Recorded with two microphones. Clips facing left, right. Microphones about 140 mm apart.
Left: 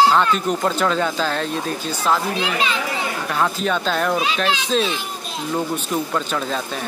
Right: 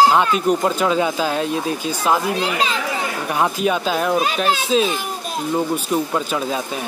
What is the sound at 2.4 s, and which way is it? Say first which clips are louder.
Speech: right 1 dB; 35° right (ahead or behind).